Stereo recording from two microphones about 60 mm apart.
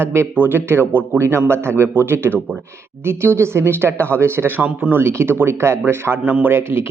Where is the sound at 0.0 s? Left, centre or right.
Right.